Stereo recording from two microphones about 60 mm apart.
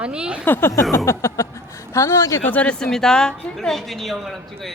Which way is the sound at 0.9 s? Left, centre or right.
Left.